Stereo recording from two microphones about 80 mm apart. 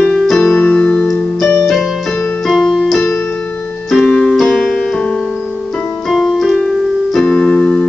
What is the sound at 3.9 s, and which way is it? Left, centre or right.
Music, centre.